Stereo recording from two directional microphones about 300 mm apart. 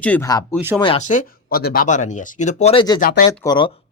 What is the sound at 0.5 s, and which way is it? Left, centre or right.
Speech, centre.